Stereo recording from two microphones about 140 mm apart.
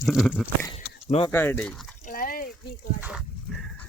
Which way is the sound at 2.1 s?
90° left.